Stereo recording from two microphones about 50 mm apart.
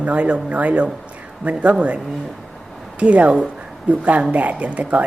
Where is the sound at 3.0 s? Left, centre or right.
Right.